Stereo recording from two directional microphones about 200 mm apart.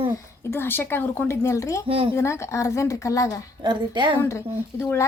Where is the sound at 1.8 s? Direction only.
25° right (ahead or behind).